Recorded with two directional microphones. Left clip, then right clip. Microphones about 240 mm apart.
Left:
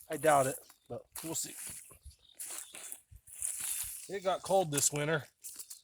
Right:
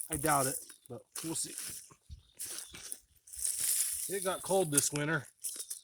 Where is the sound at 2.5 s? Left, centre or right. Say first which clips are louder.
Right 1 dB; centre.